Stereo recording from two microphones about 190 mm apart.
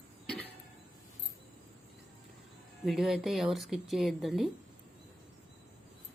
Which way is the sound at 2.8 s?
Centre (ahead or behind).